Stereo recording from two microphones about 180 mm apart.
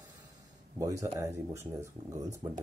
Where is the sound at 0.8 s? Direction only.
20° right (ahead or behind).